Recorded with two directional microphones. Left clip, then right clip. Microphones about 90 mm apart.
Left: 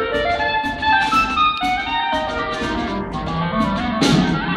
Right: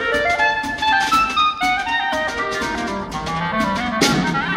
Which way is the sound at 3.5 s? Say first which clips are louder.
Even; 25° right (ahead or behind).